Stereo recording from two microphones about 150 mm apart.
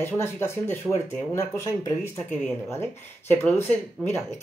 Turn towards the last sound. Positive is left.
turn(degrees=10)  # may be behind; listen again after turning